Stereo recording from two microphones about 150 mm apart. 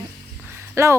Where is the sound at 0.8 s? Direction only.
20° right (ahead or behind).